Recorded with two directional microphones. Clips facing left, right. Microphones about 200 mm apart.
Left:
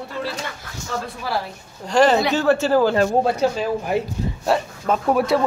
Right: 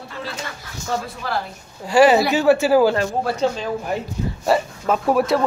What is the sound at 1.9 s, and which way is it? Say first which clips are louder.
Speech: right 2 dB; 5° right (ahead or behind).